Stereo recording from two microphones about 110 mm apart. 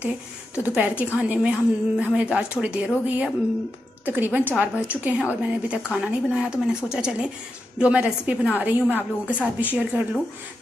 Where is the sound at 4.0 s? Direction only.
15° right (ahead or behind).